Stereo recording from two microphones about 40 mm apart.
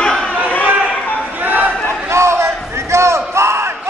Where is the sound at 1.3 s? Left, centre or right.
Right.